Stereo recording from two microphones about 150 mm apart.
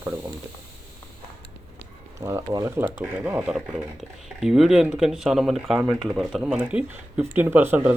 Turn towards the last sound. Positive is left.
turn(degrees=-15)  # may be behind; listen again after turning